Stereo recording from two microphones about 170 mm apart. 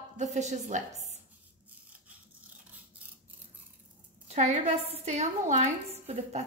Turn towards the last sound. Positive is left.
turn(degrees=-40)  # may be behind; listen again after turning